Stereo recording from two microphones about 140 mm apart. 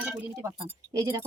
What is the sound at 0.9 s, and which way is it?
Speech, 20° right (ahead or behind).